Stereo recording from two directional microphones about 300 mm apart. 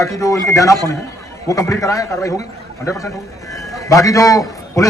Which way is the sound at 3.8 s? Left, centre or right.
Centre.